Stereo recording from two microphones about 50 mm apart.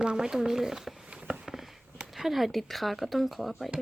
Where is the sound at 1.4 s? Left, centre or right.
Centre.